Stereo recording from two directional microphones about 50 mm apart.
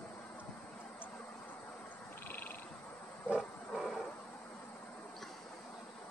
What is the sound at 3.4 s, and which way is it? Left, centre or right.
Music, centre.